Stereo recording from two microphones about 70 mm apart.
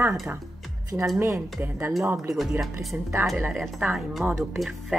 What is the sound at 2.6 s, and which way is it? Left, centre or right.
Speech, centre.